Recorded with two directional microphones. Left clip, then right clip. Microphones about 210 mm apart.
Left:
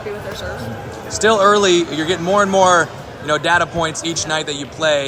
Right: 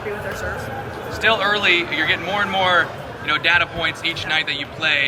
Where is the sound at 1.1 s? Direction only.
30° left (ahead or behind).